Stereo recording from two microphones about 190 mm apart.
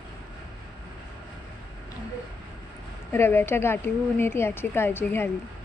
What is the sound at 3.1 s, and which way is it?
A woman's voice, 10° left (ahead or behind).